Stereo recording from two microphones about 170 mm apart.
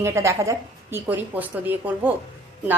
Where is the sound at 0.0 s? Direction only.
15° right (ahead or behind).